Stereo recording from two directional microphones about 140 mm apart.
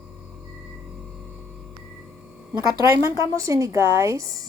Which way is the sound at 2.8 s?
20° right (ahead or behind).